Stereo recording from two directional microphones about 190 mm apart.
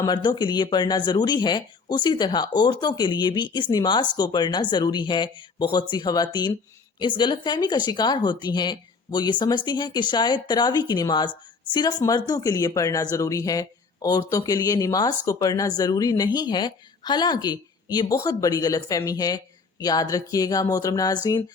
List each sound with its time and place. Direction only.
0.0 s speech: 20° left (ahead or behind)